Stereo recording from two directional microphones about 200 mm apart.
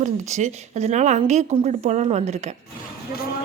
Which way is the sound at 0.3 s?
35° right (ahead or behind).